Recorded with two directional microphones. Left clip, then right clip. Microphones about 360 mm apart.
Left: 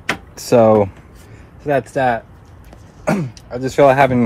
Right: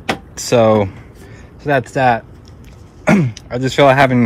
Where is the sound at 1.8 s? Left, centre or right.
Right.